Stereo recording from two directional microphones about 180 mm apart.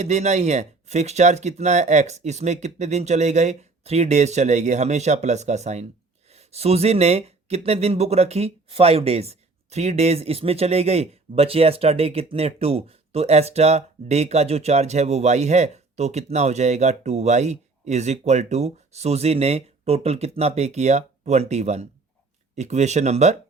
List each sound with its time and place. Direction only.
0.0 s speech: 40° right (ahead or behind)